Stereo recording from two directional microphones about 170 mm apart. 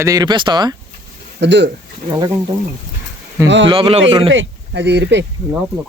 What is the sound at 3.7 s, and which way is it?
Speech, 35° right (ahead or behind).